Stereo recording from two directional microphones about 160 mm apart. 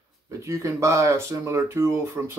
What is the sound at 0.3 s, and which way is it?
Speech, 20° right (ahead or behind).